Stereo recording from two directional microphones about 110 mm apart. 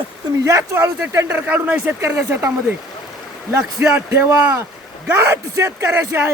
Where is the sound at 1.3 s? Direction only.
15° right (ahead or behind).